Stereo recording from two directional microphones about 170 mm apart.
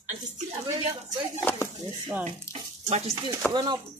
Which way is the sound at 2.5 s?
40° right (ahead or behind).